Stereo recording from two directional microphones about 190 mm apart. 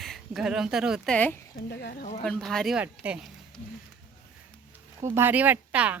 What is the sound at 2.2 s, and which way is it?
Speech, centre (ahead or behind).